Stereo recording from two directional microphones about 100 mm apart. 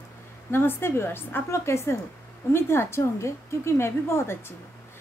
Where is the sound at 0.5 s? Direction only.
20° left (ahead or behind).